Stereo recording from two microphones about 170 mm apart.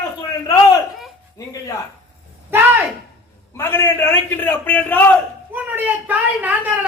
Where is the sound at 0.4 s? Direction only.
20° left (ahead or behind).